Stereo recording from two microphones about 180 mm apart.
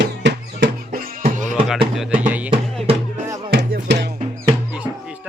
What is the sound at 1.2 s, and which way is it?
Music, 45° right (ahead or behind).